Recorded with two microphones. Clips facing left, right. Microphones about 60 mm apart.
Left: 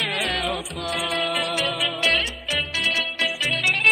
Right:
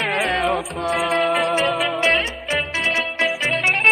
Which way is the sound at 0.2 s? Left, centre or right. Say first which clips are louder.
Right 6 dB; right.